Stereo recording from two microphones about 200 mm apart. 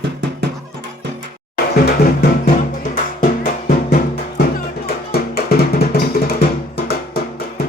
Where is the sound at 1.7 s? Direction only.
50° left (ahead or behind).